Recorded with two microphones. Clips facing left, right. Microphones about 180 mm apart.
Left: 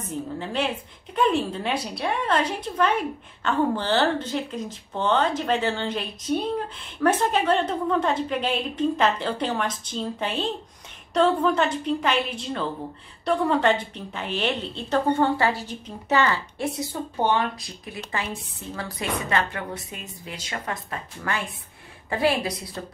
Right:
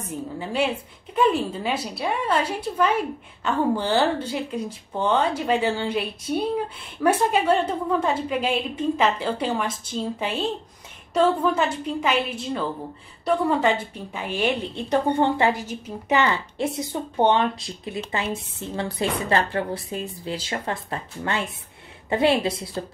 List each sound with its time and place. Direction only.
0.1 s a woman's voice: 10° right (ahead or behind)
15.6 s a woman's voice: 10° right (ahead or behind)
16.2 s a woman's voice: 20° right (ahead or behind)